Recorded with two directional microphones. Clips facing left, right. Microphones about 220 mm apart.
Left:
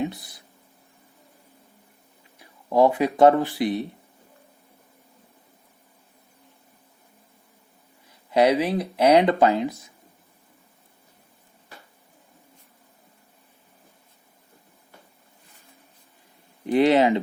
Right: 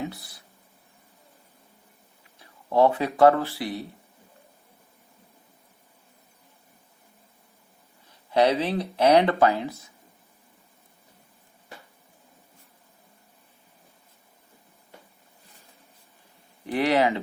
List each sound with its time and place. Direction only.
0.0 s speech: 20° left (ahead or behind)
2.4 s speech: 15° left (ahead or behind)
8.3 s speech: 15° left (ahead or behind)
16.6 s speech: 20° left (ahead or behind)